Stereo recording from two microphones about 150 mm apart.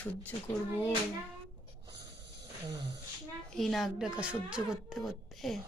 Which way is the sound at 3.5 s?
Centre (ahead or behind).